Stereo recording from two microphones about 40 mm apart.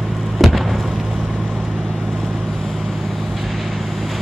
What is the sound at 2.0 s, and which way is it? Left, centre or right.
Vehicle, centre.